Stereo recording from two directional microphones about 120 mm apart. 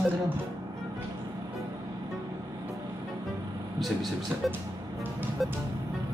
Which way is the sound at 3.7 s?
Centre (ahead or behind).